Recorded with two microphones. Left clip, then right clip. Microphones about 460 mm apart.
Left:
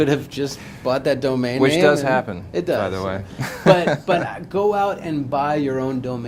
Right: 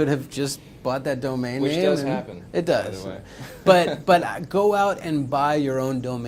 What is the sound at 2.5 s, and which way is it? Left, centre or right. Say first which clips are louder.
Speech: left 1 dB; right.